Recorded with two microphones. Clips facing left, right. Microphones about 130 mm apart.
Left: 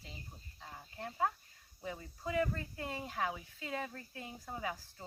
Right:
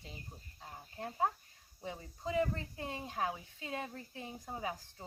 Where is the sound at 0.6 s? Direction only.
25° right (ahead or behind).